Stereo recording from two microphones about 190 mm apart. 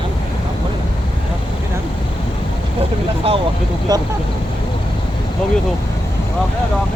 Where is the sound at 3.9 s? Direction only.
20° right (ahead or behind).